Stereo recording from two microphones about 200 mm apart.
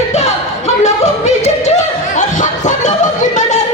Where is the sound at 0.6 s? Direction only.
35° left (ahead or behind).